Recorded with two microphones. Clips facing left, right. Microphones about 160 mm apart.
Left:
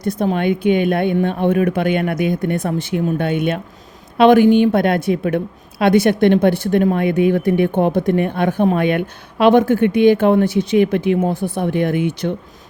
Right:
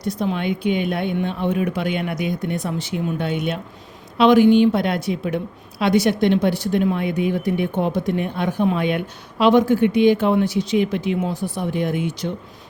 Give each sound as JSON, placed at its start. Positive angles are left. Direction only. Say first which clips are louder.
{"t": 0.0, "sound": "speech", "louder": "left 5 dB", "side_deg": 55}